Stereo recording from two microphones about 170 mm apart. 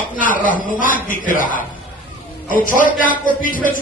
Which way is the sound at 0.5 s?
50° left (ahead or behind).